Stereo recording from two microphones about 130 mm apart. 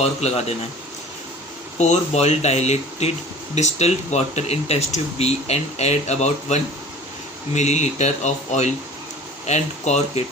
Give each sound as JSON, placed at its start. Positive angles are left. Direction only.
{"t": 0.0, "sound": "speech", "side_deg": 55}
{"t": 1.8, "sound": "speech", "side_deg": 60}